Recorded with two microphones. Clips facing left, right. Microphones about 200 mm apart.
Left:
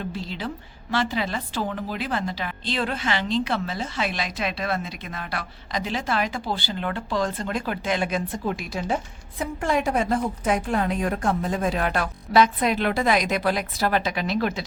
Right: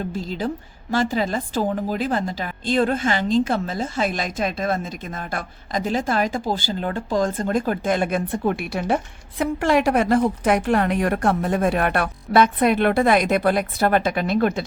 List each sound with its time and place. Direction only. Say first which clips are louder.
0.0 s a woman's voice: right 5 dB; 45° right (ahead or behind); by 9.0 s 65° right (ahead or behind)
9.4 s a woman's voice: right 5 dB; 75° right (ahead or behind); by 14.6 s 50° right (ahead or behind)